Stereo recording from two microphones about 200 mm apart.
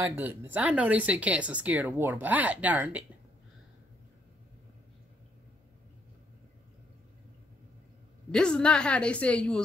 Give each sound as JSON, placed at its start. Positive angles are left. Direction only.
{"t": 0.0, "sound": "speech", "side_deg": -10}
{"t": 8.3, "sound": "a woman's voice", "side_deg": 5}